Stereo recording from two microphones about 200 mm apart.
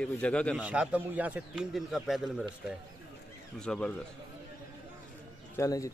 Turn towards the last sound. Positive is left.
turn(degrees=15)  # may be behind; listen again after turning